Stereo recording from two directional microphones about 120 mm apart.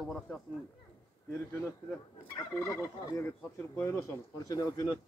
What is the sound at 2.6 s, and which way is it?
Speech, 25° left (ahead or behind).